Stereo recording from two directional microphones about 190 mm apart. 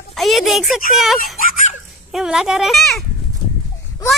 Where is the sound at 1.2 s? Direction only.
45° left (ahead or behind).